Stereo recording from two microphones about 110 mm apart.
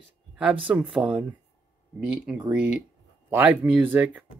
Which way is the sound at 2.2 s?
10° right (ahead or behind).